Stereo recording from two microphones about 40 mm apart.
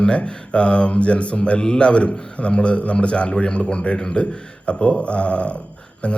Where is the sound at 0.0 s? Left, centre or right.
Left.